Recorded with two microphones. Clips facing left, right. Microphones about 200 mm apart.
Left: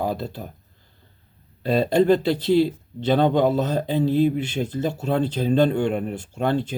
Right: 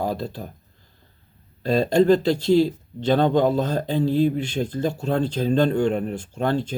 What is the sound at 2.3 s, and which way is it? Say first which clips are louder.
Speech: right 1 dB; 45° right (ahead or behind).